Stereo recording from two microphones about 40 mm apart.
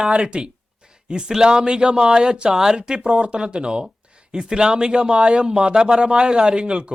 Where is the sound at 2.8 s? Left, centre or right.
Right.